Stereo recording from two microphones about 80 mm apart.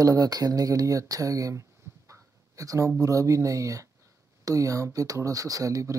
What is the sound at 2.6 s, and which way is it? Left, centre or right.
Speech, right.